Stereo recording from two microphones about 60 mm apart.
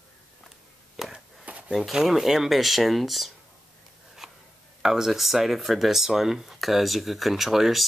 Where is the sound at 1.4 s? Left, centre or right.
Right.